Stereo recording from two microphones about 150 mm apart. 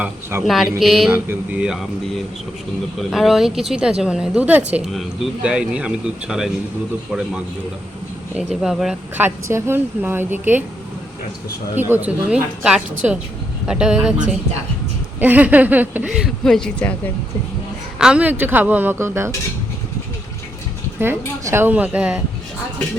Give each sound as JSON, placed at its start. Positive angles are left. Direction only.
{"t": 0.0, "sound": "a woman's voice", "side_deg": -15}
{"t": 0.4, "sound": "a woman's voice", "side_deg": 0}
{"t": 8.6, "sound": "speech", "side_deg": -5}
{"t": 9.2, "sound": "a woman's voice", "side_deg": -15}
{"t": 11.7, "sound": "a woman's voice", "side_deg": -15}
{"t": 15.2, "sound": "a woman's voice", "side_deg": -10}
{"t": 16.1, "sound": "speech", "side_deg": 0}
{"t": 18.0, "sound": "a woman's voice", "side_deg": -10}
{"t": 21.0, "sound": "a woman's voice", "side_deg": -15}